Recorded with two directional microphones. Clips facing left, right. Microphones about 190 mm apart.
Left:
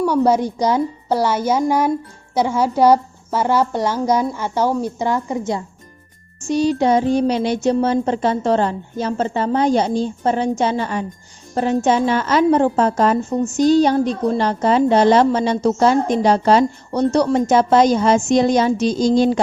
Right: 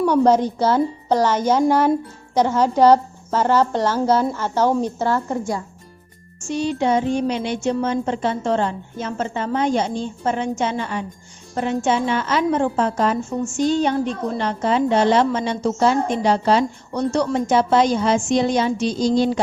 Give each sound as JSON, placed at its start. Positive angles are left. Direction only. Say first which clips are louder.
{"t": 0.0, "sound": "a woman's voice", "louder": "even", "side_deg": 10}
{"t": 6.5, "sound": "a woman's voice", "louder": "left 4 dB", "side_deg": 40}